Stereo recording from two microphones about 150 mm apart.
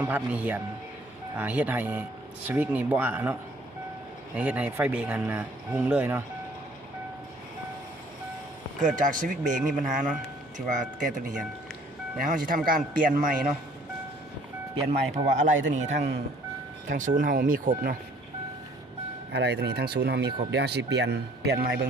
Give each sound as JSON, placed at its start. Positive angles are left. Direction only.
{"t": 0.0, "sound": "speech", "side_deg": -10}
{"t": 4.4, "sound": "speech", "side_deg": -10}
{"t": 8.8, "sound": "speech", "side_deg": -60}
{"t": 15.1, "sound": "speech", "side_deg": -55}
{"t": 19.3, "sound": "speech", "side_deg": -90}